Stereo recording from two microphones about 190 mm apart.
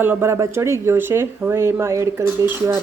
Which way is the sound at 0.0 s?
10° right (ahead or behind).